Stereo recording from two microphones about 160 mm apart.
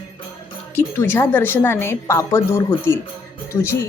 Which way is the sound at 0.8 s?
15° left (ahead or behind).